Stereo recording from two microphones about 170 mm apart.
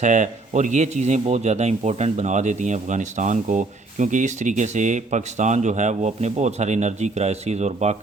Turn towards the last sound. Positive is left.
turn(degrees=-40)  # may be behind; listen again after turning